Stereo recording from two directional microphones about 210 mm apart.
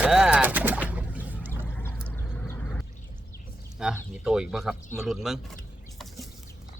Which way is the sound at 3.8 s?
5° right (ahead or behind).